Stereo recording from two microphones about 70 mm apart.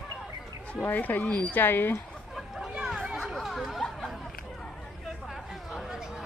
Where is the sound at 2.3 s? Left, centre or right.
Centre.